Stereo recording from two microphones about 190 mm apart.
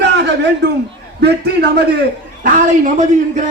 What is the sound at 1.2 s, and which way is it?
Speech, 60° right (ahead or behind).